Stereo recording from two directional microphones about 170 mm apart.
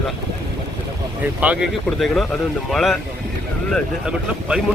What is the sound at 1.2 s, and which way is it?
Speech, 10° right (ahead or behind).